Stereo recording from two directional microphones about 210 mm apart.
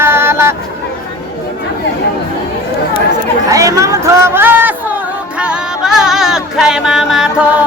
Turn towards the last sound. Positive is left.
turn(degrees=-5)  # may be behind; listen again after turning